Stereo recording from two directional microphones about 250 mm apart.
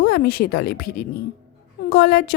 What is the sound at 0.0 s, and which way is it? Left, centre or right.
Speech, left.